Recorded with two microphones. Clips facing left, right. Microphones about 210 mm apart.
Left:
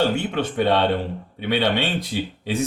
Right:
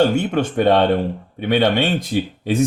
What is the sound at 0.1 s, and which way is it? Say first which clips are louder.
A man's voice: right 5 dB; 45° right (ahead or behind).